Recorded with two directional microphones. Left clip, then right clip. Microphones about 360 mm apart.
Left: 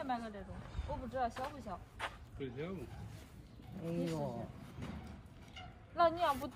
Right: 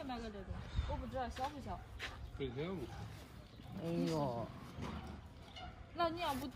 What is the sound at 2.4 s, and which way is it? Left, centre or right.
Speech, centre.